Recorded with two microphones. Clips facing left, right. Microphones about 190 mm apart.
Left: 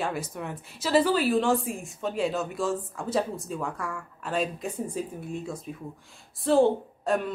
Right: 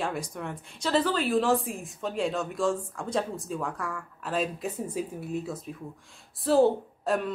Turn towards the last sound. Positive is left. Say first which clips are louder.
# left 1 dB
turn(degrees=0)  # may be behind; listen again after turning